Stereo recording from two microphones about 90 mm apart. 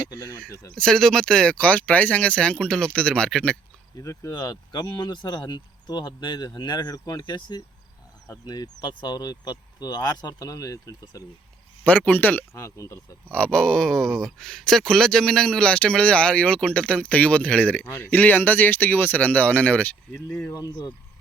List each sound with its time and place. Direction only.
0.1 s speech: 50° left (ahead or behind)
0.8 s speech: 5° left (ahead or behind)
3.9 s speech: 35° left (ahead or behind)
4.4 s speech: 50° left (ahead or behind)
11.8 s speech: 15° left (ahead or behind)
12.5 s speech: 35° left (ahead or behind)
13.3 s speech: 10° left (ahead or behind)